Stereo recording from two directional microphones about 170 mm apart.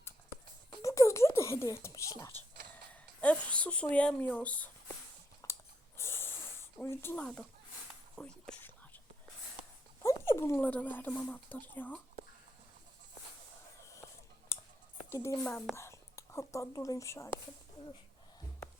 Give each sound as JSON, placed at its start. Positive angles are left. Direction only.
{"t": 0.7, "sound": "whispering", "side_deg": 20}
{"t": 2.9, "sound": "speech", "side_deg": 5}
{"t": 5.4, "sound": "chewing", "side_deg": 20}
{"t": 6.0, "sound": "snort", "side_deg": 15}
{"t": 6.8, "sound": "speech", "side_deg": 15}
{"t": 10.0, "sound": "speech", "side_deg": 15}
{"t": 14.5, "sound": "clicking", "side_deg": 15}
{"t": 15.1, "sound": "speech", "side_deg": 15}
{"t": 15.4, "sound": "a woman's voice", "side_deg": 5}
{"t": 15.7, "sound": "speech", "side_deg": 15}